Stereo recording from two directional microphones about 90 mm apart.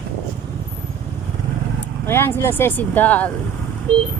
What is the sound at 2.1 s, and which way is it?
Speech, 25° left (ahead or behind).